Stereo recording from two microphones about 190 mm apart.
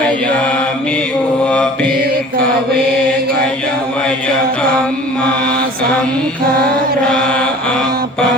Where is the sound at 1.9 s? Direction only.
55° right (ahead or behind).